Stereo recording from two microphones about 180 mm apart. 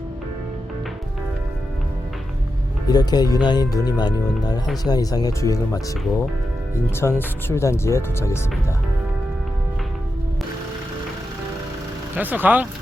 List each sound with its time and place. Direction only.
2.8 s speech: 20° left (ahead or behind)
12.1 s speech: 10° right (ahead or behind)